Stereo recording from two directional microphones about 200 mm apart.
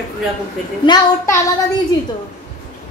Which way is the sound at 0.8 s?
20° left (ahead or behind).